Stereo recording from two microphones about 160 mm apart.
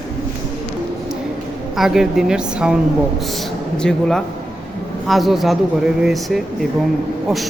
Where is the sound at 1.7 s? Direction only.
Centre (ahead or behind).